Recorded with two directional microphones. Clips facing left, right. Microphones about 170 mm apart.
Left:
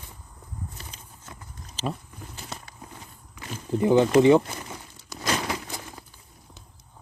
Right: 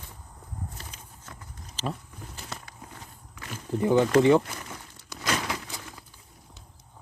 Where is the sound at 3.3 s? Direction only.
20° left (ahead or behind).